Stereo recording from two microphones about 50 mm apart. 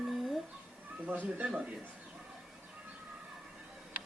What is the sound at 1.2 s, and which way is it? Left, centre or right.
Speech, right.